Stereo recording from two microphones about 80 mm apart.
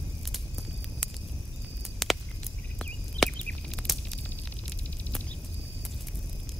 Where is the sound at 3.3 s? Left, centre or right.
Centre.